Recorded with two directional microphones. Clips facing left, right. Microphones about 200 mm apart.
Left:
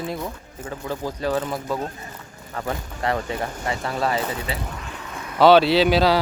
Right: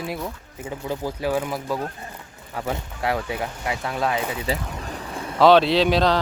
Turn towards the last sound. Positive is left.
turn(degrees=5)  # may be behind; listen again after turning